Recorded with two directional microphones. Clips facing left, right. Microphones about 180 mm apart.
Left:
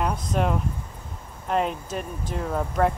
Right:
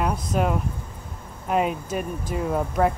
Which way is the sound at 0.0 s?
5° right (ahead or behind).